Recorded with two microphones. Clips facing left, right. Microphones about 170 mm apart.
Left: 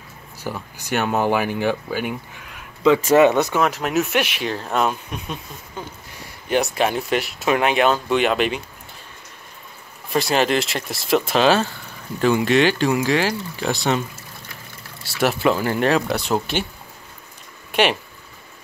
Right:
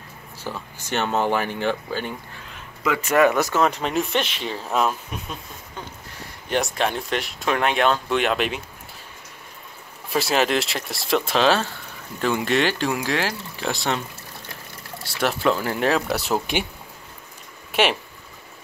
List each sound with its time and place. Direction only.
0.4 s speech: 15° left (ahead or behind)
2.8 s speech: 25° left (ahead or behind)
3.6 s speech: centre (ahead or behind)
6.5 s speech: 5° left (ahead or behind)
10.0 s speech: 5° right (ahead or behind)
15.1 s speech: 5° left (ahead or behind)
17.7 s speech: 5° right (ahead or behind)